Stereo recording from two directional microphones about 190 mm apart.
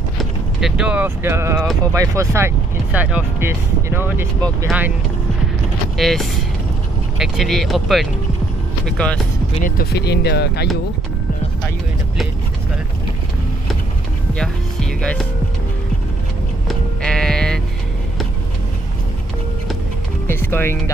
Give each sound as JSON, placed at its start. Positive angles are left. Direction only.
{"t": 0.6, "sound": "speech", "side_deg": -5}
{"t": 5.9, "sound": "speech", "side_deg": 0}
{"t": 9.7, "sound": "speech", "side_deg": 55}
{"t": 14.3, "sound": "music", "side_deg": 5}
{"t": 16.6, "sound": "sheep", "side_deg": 5}
{"t": 20.2, "sound": "speech", "side_deg": 10}